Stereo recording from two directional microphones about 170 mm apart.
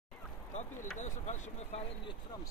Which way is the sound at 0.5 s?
45° left (ahead or behind).